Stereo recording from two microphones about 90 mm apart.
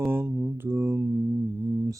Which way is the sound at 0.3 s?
10° right (ahead or behind).